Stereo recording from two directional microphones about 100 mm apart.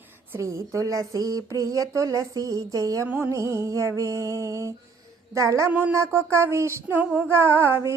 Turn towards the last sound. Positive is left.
turn(degrees=-25)  # may be behind; listen again after turning